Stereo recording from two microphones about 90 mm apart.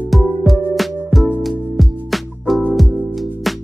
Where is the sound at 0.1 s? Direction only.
Centre (ahead or behind).